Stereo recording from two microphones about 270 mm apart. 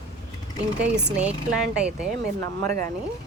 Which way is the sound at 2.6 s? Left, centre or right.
Right.